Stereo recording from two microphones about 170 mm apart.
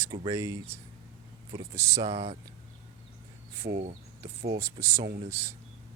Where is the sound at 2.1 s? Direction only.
35° right (ahead or behind).